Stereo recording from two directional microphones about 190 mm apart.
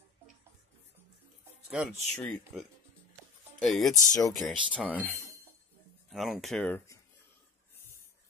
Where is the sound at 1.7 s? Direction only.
5° right (ahead or behind).